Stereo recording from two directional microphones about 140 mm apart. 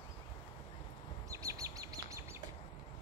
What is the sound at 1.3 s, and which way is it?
Bird, 25° right (ahead or behind).